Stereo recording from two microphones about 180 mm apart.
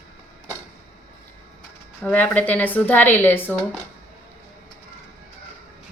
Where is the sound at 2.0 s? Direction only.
10° left (ahead or behind).